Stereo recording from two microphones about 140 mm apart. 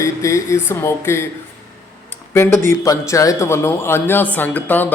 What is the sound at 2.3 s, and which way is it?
A man's voice, 20° left (ahead or behind).